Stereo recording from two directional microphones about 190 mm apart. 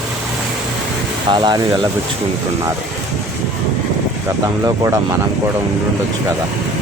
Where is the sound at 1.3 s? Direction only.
20° right (ahead or behind).